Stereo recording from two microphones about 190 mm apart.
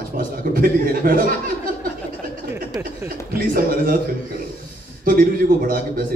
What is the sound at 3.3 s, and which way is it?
Speech, 50° right (ahead or behind).